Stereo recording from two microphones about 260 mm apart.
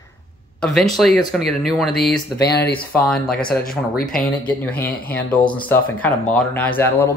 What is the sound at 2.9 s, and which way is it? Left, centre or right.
Speech, centre.